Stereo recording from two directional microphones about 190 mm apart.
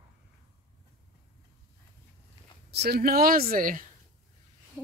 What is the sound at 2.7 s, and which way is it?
Speech, 55° right (ahead or behind).